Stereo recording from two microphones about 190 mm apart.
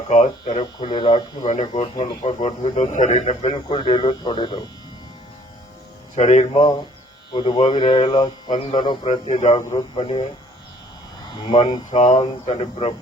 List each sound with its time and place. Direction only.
0.1 s speech: 40° left (ahead or behind)
0.4 s speech: 25° left (ahead or behind)
1.5 s speech: 35° left (ahead or behind)
6.1 s speech: 35° left (ahead or behind)
7.3 s speech: 25° left (ahead or behind)
9.6 s speech: 25° left (ahead or behind)
11.4 s speech: 20° left (ahead or behind)
11.9 s speech: 35° left (ahead or behind)